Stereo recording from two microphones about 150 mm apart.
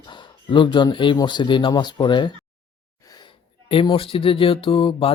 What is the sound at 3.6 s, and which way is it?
Speech, 35° left (ahead or behind).